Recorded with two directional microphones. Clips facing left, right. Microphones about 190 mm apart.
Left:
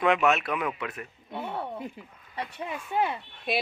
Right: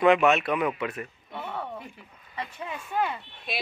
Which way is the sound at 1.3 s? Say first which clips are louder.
Left 3 dB; 25° left (ahead or behind).